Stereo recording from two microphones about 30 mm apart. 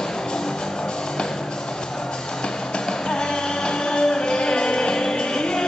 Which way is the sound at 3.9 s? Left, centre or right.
Left.